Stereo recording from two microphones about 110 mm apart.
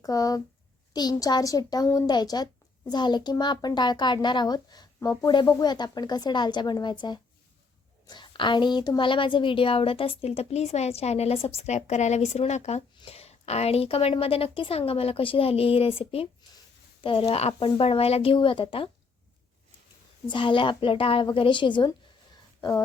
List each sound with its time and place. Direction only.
0.0 s speech: 35° left (ahead or behind)
8.0 s a woman's voice: 45° left (ahead or behind); by 12.8 s 90° left
13.1 s a woman's voice: 70° left (ahead or behind)
20.2 s speech: 50° left (ahead or behind)